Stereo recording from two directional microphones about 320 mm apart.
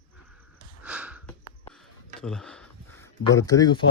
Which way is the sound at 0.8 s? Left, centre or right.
Centre.